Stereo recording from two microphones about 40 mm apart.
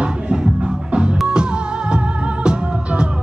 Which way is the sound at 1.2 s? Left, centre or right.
Right.